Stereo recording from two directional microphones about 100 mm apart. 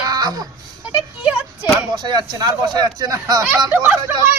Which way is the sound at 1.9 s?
45° right (ahead or behind).